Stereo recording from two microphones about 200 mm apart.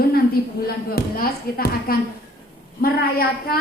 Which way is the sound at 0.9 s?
50° left (ahead or behind).